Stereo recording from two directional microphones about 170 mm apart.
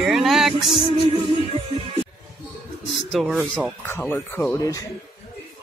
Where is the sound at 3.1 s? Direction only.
Centre (ahead or behind).